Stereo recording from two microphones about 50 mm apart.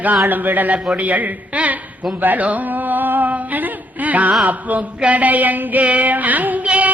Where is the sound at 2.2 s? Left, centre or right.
Right.